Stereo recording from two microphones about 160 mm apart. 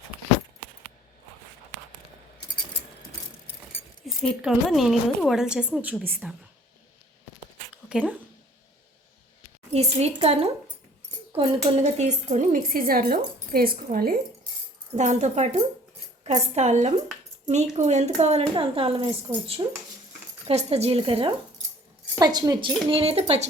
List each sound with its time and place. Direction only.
4.0 s a woman's voice: centre (ahead or behind)
7.7 s a sound: 5° right (ahead or behind)
9.7 s a woman's voice: 40° right (ahead or behind); by 14.2 s 65° right (ahead or behind)
14.9 s a woman's voice: 45° right (ahead or behind); by 19.8 s 30° right (ahead or behind)
20.5 s a woman's voice: 40° right (ahead or behind)